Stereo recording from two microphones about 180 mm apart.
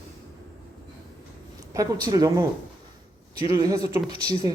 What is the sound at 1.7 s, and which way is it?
Speech, 20° right (ahead or behind).